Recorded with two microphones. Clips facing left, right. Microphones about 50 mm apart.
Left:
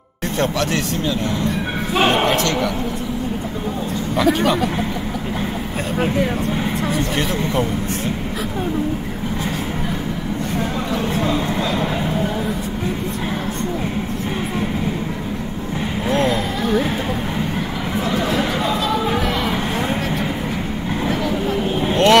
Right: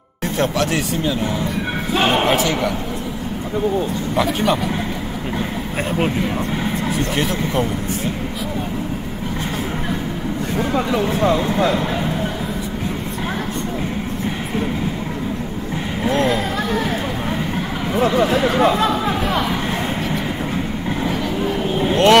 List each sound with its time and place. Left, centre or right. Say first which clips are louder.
0.4 s speech: right 1 dB; centre
6.9 s speech: even; centre
16.1 s vehicle: right 1 dB; centre
17.9 s speech: right 4 dB; right
21.9 s speech: right 1 dB; centre